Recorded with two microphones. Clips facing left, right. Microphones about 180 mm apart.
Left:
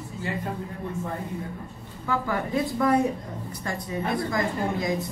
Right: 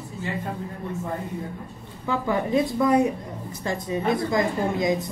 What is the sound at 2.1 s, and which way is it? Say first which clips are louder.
Speech: right 4 dB; 20° right (ahead or behind).